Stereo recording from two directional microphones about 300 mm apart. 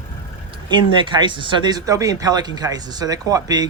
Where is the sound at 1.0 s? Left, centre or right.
Centre.